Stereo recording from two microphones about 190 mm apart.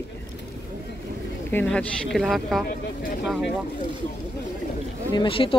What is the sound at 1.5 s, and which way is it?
Speech, 10° left (ahead or behind).